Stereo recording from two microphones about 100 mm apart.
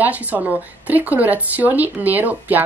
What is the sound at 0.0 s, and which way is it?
A woman's voice, 15° right (ahead or behind).